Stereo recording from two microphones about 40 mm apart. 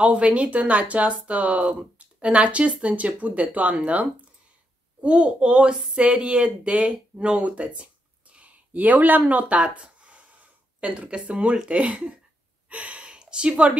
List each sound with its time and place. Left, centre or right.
0.0 s a woman's voice: right
9.3 s a sound: right
11.2 s a woman's voice: right
12.6 s gasp: right